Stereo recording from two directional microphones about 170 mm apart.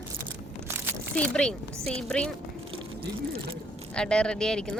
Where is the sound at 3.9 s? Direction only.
5° left (ahead or behind).